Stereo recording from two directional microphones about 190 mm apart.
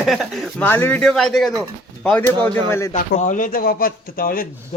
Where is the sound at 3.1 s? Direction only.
40° left (ahead or behind).